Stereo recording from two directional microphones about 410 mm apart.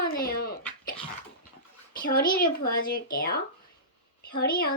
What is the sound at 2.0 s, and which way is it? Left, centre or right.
Speech, left.